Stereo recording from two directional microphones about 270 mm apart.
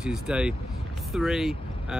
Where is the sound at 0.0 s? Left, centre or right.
Centre.